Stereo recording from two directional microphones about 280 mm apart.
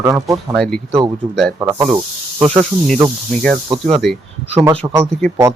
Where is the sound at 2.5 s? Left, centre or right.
Centre.